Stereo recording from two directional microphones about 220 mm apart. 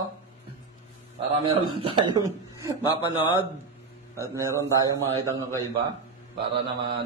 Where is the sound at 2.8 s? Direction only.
20° left (ahead or behind).